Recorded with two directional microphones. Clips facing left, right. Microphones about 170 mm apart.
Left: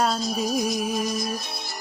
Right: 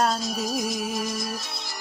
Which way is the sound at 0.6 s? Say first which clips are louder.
Left 3 dB; 50° left (ahead or behind).